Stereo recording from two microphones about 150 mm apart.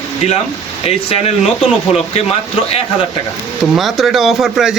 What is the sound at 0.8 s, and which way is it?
Speech, 45° left (ahead or behind).